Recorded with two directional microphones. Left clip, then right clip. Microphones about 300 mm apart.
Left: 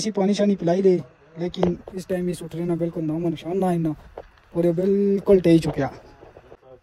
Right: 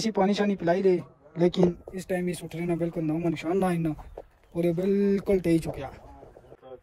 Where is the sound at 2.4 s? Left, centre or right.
Centre.